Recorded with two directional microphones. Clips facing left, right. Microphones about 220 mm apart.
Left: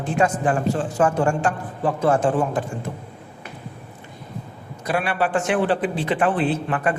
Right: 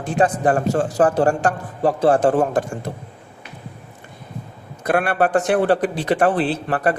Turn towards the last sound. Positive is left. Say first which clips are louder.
# right 2 dB
turn(degrees=-40)  # may be behind; listen again after turning